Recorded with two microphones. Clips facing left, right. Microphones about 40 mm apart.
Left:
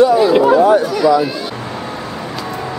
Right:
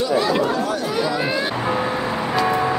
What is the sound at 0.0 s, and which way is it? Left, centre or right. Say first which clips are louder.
Chatter: left 9 dB; centre.